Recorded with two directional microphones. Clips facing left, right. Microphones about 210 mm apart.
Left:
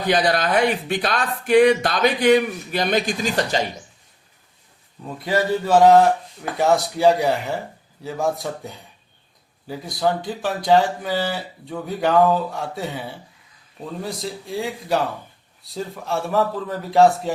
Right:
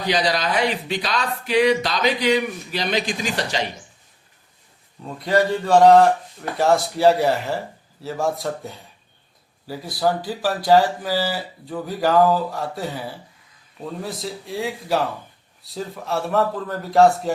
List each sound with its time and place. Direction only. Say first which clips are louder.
0.0 s speech: left 2 dB; 50° left (ahead or behind)
5.0 s speech: right 2 dB; 5° left (ahead or behind)